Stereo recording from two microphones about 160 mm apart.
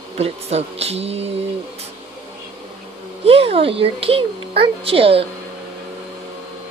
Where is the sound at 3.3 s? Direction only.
35° right (ahead or behind).